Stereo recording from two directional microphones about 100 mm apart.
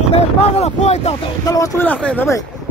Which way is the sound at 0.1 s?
90° left.